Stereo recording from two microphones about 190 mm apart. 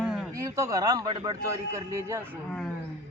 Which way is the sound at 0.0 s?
Centre (ahead or behind).